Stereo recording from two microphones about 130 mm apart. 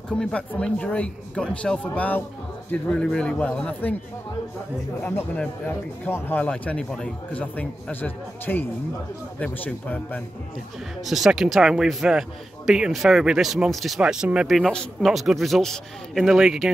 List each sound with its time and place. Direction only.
0.1 s speech: 10° left (ahead or behind)
5.0 s speech: 15° left (ahead or behind)
11.1 s a man's voice: centre (ahead or behind)